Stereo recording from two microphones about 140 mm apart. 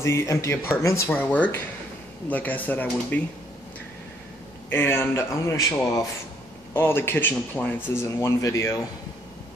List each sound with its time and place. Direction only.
0.0 s speech: 20° left (ahead or behind)
4.6 s speech: 15° left (ahead or behind)